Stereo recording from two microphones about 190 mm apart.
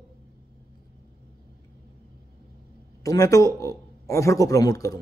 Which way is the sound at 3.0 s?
20° left (ahead or behind).